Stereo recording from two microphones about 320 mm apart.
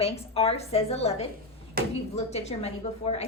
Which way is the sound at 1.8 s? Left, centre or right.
Right.